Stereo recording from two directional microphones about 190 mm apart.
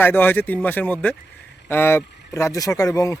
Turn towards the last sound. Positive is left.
turn(degrees=15)  # may be behind; listen again after turning